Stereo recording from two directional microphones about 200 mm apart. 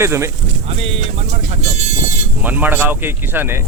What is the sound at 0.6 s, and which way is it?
Speech, 30° right (ahead or behind).